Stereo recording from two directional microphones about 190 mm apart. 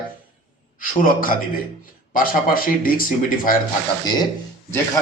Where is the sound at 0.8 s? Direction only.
45° left (ahead or behind).